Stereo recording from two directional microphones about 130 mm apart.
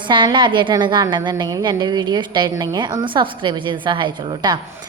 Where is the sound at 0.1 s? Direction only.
40° right (ahead or behind).